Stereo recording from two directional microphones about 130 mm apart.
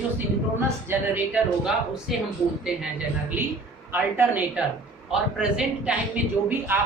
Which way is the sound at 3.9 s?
15° right (ahead or behind).